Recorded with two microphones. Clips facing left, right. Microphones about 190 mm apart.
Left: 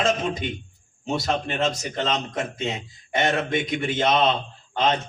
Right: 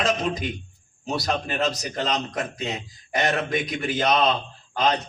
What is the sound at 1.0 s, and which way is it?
A man's voice, 25° left (ahead or behind).